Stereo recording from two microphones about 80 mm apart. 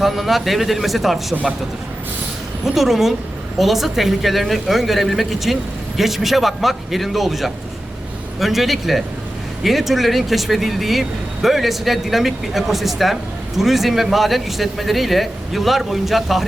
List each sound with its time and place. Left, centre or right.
0.0 s a man's voice: centre
2.7 s a man's voice: centre